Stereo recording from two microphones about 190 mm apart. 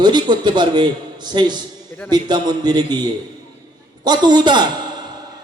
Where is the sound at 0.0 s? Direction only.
25° right (ahead or behind).